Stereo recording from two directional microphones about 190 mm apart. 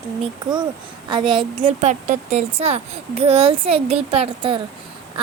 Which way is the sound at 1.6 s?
40° right (ahead or behind).